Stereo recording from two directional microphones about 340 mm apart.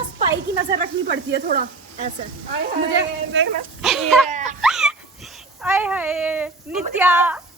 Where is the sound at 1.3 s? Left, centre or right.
Right.